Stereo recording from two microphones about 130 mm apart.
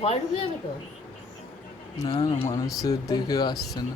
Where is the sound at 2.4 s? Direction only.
25° left (ahead or behind).